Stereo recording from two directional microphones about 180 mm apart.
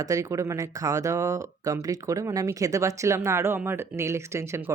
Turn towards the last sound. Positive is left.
turn(degrees=-15)  # may be behind; listen again after turning